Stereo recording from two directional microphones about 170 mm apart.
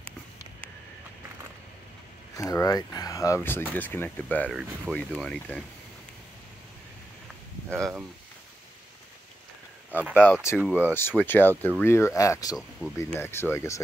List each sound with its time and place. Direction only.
2.3 s speech: 20° left (ahead or behind)
4.5 s speech: centre (ahead or behind)
9.8 s speech: 10° right (ahead or behind)
10.1 s speech: 10° left (ahead or behind)
10.6 s speech: 10° right (ahead or behind)
10.9 s speech: 10° left (ahead or behind)